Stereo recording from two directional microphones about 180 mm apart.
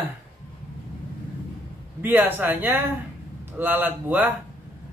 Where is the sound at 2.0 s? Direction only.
10° right (ahead or behind).